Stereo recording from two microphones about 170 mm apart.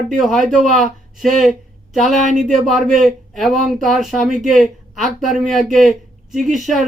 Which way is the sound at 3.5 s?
50° right (ahead or behind).